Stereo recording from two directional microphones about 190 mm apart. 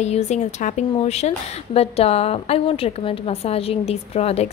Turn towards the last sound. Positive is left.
turn(degrees=35)  # may be behind; listen again after turning